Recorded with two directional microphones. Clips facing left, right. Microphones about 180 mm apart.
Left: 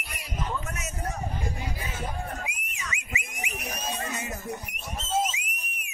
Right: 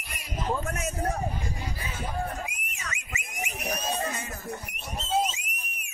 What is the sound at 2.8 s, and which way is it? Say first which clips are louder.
Whistle: left 3 dB; 45° right (ahead or behind).